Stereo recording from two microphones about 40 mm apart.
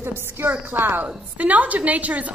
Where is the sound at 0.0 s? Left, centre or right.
Right.